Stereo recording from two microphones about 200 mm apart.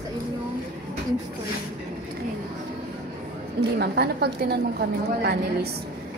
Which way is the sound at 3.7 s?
55° right (ahead or behind).